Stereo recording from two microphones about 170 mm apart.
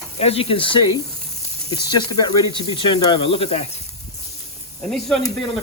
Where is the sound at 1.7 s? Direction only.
25° left (ahead or behind).